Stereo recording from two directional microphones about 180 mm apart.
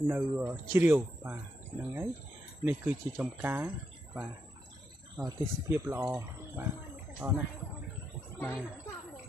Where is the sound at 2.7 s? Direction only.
10° right (ahead or behind).